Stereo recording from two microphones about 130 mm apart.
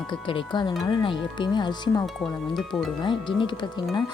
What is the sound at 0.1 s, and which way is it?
Speech, 40° left (ahead or behind).